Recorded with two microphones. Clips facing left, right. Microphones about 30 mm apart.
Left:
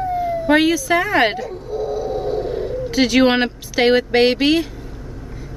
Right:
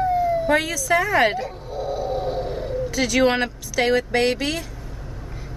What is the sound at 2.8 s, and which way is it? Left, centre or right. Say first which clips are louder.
Speech: left 5 dB; left.